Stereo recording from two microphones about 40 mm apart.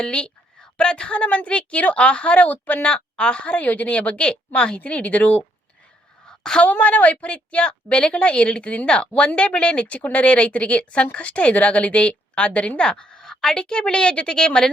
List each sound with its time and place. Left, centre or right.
0.0 s a woman's voice: left
6.2 s a sound: centre
6.6 s speech: left; by 14.7 s centre